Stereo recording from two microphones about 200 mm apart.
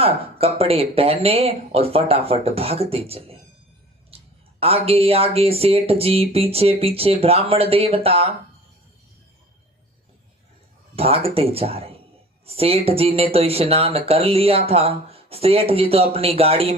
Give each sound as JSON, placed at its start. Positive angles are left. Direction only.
{"t": 0.0, "sound": "speech", "side_deg": -30}
{"t": 4.1, "sound": "a sound", "side_deg": -30}
{"t": 4.6, "sound": "speech", "side_deg": -30}
{"t": 10.9, "sound": "speech", "side_deg": -30}